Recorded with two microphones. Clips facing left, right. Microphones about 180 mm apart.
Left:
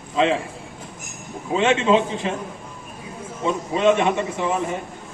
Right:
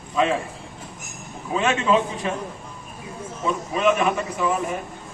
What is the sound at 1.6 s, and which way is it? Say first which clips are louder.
Speech: left 3 dB; 25° left (ahead or behind).